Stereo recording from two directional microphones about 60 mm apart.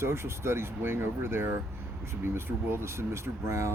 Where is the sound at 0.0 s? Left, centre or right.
Right.